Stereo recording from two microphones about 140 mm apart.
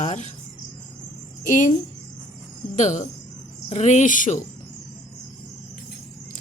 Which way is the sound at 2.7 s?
60° left (ahead or behind).